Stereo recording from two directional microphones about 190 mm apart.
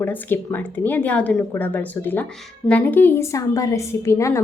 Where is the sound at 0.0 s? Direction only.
10° left (ahead or behind).